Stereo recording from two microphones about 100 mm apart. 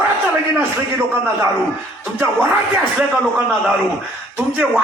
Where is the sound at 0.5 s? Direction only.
25° right (ahead or behind).